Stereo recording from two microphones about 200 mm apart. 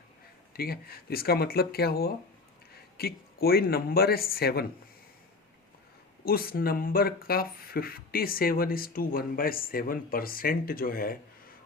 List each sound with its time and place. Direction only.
0.5 s speech: 50° left (ahead or behind)
6.2 s speech: 50° left (ahead or behind)